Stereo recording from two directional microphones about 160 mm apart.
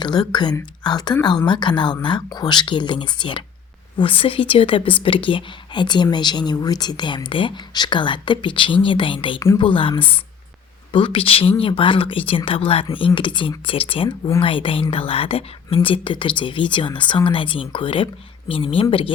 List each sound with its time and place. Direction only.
0.0 s speech: 25° left (ahead or behind)